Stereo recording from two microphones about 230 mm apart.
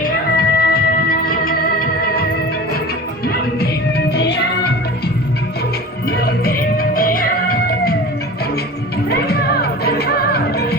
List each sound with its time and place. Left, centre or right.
0.0 s music: left
3.2 s music: left
6.1 s music: left
9.0 s music: left